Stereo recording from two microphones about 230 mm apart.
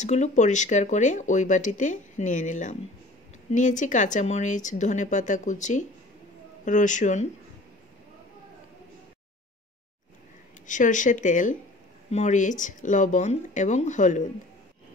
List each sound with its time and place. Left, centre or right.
0.0 s speech: left
10.7 s speech: left